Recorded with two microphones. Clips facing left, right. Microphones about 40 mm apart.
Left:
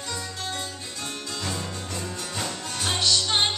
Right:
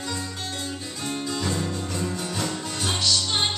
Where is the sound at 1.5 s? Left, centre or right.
Centre.